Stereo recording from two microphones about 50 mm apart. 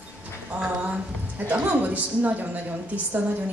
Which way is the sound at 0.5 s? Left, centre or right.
Right.